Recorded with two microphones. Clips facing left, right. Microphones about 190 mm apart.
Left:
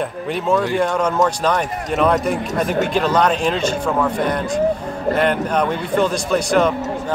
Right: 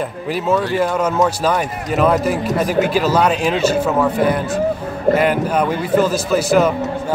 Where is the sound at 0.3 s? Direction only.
5° right (ahead or behind).